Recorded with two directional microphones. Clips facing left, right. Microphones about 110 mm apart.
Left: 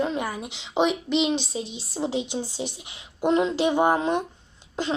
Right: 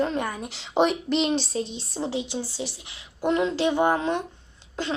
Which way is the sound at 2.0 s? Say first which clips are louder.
Left 2 dB; 20° left (ahead or behind).